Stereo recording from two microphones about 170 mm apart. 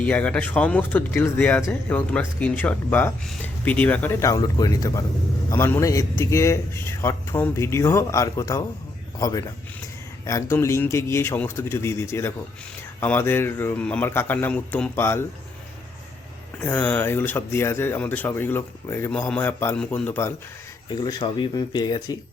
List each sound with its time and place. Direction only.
0.0 s speech: 10° left (ahead or behind)
16.6 s speech: 10° left (ahead or behind)
20.9 s speech: 25° left (ahead or behind)